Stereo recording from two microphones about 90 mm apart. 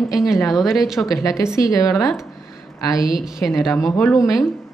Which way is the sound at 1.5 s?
40° left (ahead or behind).